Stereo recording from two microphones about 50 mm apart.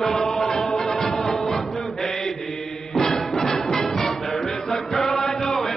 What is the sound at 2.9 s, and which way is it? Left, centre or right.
Music, centre.